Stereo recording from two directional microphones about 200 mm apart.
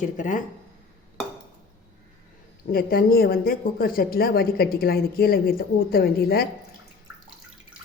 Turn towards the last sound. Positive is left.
turn(degrees=50)  # may be behind; listen again after turning